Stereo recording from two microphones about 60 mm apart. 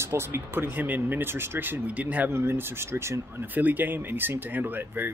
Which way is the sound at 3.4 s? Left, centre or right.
Right.